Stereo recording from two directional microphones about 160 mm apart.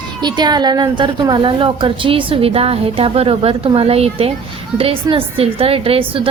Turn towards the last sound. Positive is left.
turn(degrees=-35)  # may be behind; listen again after turning